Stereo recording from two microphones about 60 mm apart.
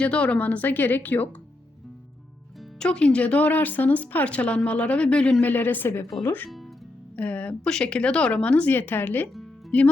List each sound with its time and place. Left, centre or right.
0.0 s speech: centre
2.7 s speech: centre
5.4 s speech: left
8.7 s speech: left